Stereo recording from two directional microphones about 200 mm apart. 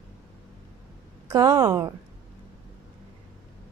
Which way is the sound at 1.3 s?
20° right (ahead or behind).